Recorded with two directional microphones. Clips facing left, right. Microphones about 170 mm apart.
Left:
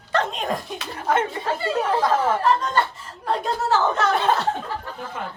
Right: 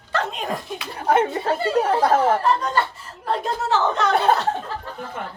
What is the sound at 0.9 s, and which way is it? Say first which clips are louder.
A woman's voice: right 3 dB; 35° right (ahead or behind).